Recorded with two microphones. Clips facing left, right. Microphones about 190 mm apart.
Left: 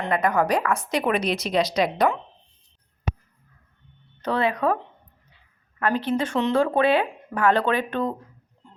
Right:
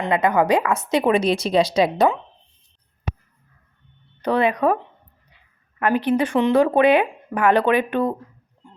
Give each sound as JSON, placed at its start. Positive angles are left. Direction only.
{"t": 0.0, "sound": "a woman's voice", "side_deg": -20}
{"t": 4.2, "sound": "speech", "side_deg": -15}
{"t": 5.8, "sound": "speech", "side_deg": -15}